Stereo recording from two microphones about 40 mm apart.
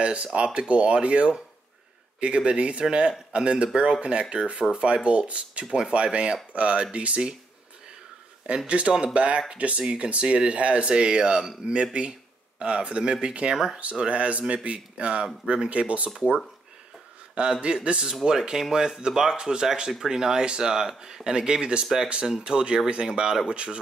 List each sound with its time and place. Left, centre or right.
0.0 s speech: right
8.6 s speech: right
17.4 s speech: right